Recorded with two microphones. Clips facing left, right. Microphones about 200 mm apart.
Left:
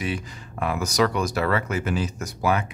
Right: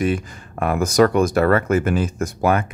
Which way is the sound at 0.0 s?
50° right (ahead or behind).